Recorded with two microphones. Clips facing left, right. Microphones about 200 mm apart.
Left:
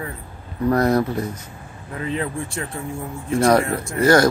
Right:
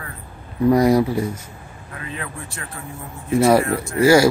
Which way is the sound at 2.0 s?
30° left (ahead or behind).